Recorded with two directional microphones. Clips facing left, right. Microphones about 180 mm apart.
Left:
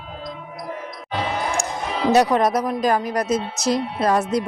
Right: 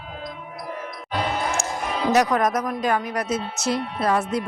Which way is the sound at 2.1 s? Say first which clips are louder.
Left 3 dB; 30° left (ahead or behind).